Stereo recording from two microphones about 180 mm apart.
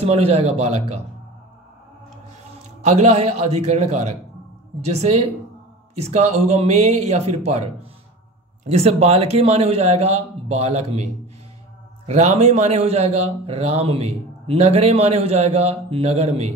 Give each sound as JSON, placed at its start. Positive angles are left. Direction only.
{"t": 0.0, "sound": "a man's voice", "side_deg": -35}
{"t": 2.8, "sound": "a man's voice", "side_deg": -40}
{"t": 8.6, "sound": "a man's voice", "side_deg": -35}
{"t": 12.1, "sound": "a man's voice", "side_deg": -40}